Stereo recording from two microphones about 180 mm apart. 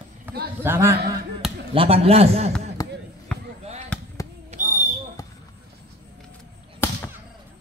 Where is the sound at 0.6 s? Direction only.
15° right (ahead or behind).